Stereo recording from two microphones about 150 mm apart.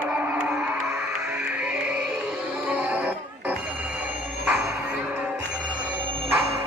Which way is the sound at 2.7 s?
10° right (ahead or behind).